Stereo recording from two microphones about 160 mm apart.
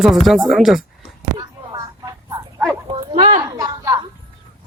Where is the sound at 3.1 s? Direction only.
55° right (ahead or behind).